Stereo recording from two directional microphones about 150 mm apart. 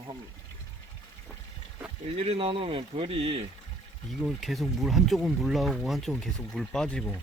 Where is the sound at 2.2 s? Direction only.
40° right (ahead or behind).